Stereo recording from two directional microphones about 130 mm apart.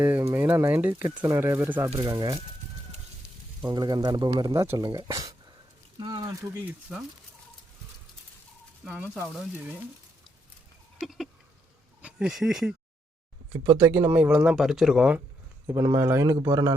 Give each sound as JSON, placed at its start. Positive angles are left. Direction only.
{"t": 0.0, "sound": "speech", "side_deg": -20}
{"t": 2.0, "sound": "speech", "side_deg": -30}
{"t": 3.7, "sound": "speech", "side_deg": -35}
{"t": 4.5, "sound": "speech", "side_deg": -20}
{"t": 6.0, "sound": "a sound", "side_deg": -35}
{"t": 6.4, "sound": "speech", "side_deg": -20}
{"t": 8.8, "sound": "speech", "side_deg": -10}
{"t": 9.2, "sound": "speech", "side_deg": 0}
{"t": 11.0, "sound": "a sound", "side_deg": 0}
{"t": 12.0, "sound": "speech", "side_deg": -5}
{"t": 13.7, "sound": "speech", "side_deg": -15}
{"t": 15.6, "sound": "speech", "side_deg": -25}